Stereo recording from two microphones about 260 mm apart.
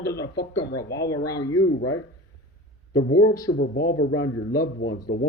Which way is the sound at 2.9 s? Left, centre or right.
Left.